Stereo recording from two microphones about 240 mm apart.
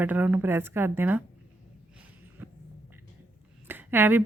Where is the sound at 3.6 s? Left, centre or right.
Centre.